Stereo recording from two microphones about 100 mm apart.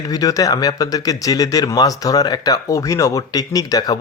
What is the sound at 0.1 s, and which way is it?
Speech, 35° left (ahead or behind).